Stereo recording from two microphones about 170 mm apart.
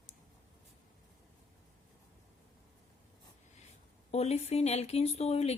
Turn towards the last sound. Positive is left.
turn(degrees=40)  # may be behind; listen again after turning